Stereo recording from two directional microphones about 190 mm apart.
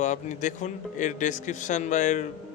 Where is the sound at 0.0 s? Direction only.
40° left (ahead or behind).